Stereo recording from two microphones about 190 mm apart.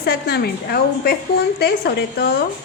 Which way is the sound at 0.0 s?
55° left (ahead or behind).